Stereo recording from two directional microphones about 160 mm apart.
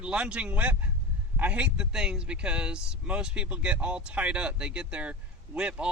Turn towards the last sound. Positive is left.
turn(degrees=-5)  # may be behind; listen again after turning